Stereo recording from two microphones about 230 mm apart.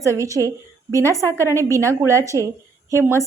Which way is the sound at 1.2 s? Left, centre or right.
Centre.